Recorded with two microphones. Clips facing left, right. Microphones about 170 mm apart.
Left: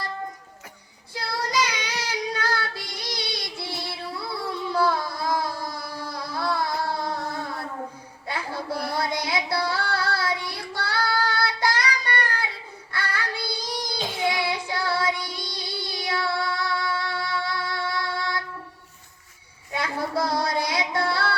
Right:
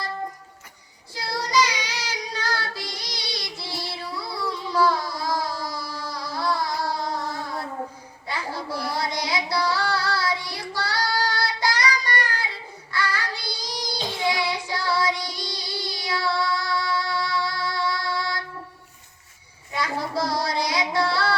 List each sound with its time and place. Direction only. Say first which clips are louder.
1.1 s child singing: right 3 dB; 55° left (ahead or behind)
4.4 s a sound: right 2 dB; 55° left (ahead or behind)
8.3 s child singing: even; 55° left (ahead or behind)
19.7 s child singing: even; 55° left (ahead or behind)